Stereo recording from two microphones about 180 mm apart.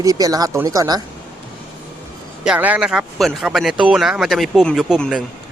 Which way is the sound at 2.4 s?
5° right (ahead or behind).